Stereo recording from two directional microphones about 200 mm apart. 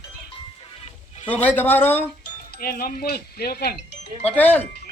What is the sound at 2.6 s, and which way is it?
Speech, 45° left (ahead or behind).